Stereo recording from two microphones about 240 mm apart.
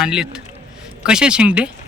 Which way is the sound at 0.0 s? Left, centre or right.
Centre.